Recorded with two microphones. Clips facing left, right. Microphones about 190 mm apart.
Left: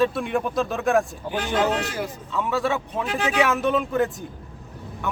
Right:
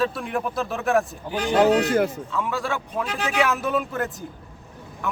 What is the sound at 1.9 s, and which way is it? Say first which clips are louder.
Speech: right 9 dB; 55° right (ahead or behind).